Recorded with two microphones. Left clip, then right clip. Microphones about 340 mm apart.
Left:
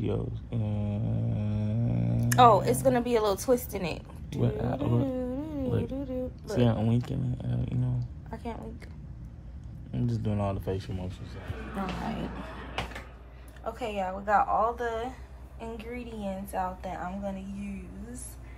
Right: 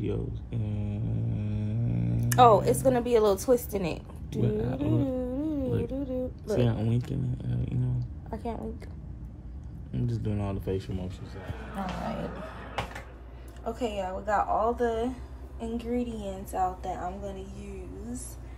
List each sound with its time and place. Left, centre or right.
0.0 s mantra: centre
2.2 s a woman's voice: centre
4.4 s a woman's voice: centre
5.1 s a sound: centre
5.7 s speech: centre
8.0 s a sound: centre
9.9 s a woman's voice: centre
13.7 s a woman's voice: centre